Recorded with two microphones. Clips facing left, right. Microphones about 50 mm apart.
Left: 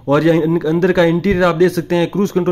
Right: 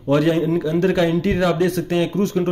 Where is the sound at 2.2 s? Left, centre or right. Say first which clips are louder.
Left 4 dB; left.